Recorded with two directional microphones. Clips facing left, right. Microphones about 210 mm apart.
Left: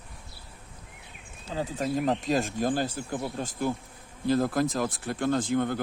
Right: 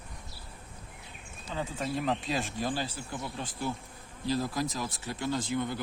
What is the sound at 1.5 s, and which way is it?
Speech, 40° left (ahead or behind).